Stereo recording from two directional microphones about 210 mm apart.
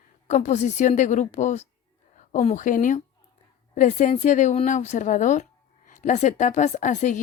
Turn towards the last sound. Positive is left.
turn(degrees=35)  # may be behind; listen again after turning